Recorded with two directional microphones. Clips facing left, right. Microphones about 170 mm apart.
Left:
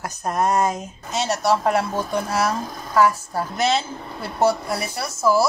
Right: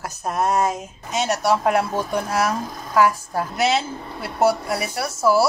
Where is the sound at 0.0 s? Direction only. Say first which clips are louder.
Left 1 dB; 5° right (ahead or behind).